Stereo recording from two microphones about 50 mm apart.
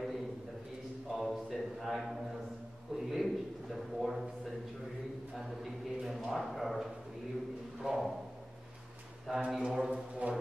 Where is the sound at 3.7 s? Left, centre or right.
Centre.